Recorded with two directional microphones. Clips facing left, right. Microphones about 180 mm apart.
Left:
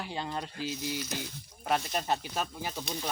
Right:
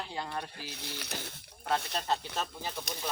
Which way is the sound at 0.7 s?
65° right (ahead or behind).